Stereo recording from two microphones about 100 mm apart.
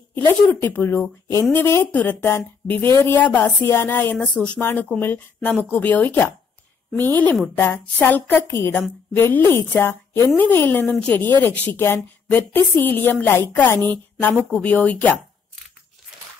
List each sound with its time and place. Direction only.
0.3 s a woman's voice: 20° left (ahead or behind)